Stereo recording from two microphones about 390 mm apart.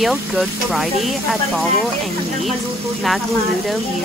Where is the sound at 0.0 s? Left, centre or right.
Centre.